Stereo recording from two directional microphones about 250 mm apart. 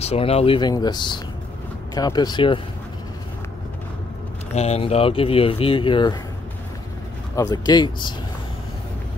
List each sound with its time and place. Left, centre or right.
0.0 s speech: left
4.6 s speech: left
7.3 s speech: centre